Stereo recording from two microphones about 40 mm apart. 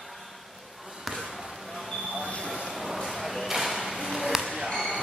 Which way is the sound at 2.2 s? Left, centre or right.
Left.